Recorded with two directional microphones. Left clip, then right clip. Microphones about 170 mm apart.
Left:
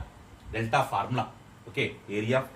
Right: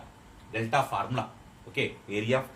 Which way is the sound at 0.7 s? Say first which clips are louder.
Left 1 dB; 40° right (ahead or behind).